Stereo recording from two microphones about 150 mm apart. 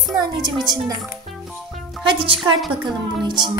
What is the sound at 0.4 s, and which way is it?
Music, 25° right (ahead or behind).